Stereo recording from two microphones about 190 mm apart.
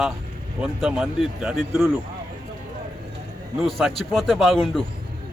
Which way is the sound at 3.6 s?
Centre (ahead or behind).